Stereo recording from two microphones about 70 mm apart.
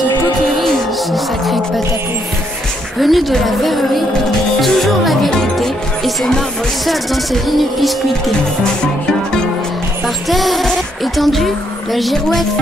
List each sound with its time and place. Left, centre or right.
1.1 s music: centre
3.0 s speech: centre
4.6 s music: centre
7.4 s speech: centre
10.0 s speech: centre